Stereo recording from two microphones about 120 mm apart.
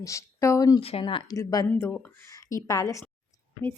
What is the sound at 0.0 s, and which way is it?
Speech, 25° left (ahead or behind).